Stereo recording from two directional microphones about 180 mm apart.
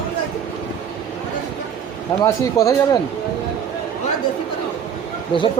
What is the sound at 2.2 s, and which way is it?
Speech, 20° left (ahead or behind).